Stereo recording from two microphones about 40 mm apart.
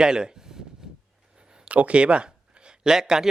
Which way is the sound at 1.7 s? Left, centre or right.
Right.